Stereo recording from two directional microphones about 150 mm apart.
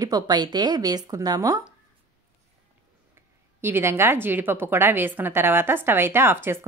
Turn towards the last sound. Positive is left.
turn(degrees=-15)  # may be behind; listen again after turning